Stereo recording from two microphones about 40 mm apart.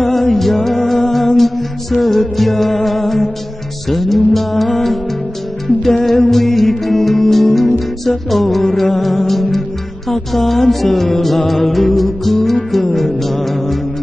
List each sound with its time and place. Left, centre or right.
0.0 s music: centre
6.0 s music: centre